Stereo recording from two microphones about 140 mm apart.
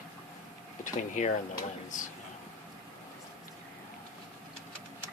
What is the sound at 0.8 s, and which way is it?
Speech, 60° left (ahead or behind).